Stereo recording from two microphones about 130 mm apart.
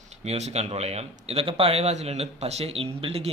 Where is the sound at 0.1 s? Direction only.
60° right (ahead or behind).